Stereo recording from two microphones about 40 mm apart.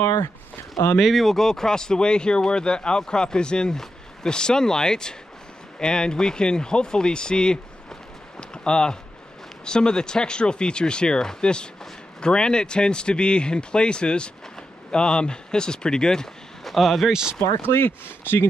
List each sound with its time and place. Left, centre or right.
0.9 s speech: centre
1.3 s speech: centre
8.4 s a sound: left
9.7 s speech: centre
16.6 s speech: centre
17.1 s speech: centre
17.6 s speech: left